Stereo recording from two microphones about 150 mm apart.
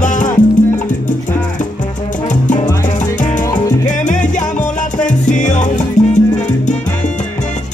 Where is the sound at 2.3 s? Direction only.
55° left (ahead or behind).